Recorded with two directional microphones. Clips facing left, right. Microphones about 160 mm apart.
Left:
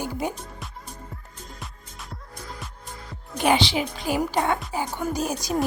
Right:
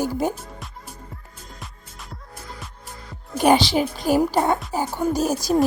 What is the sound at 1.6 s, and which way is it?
Music, centre (ahead or behind).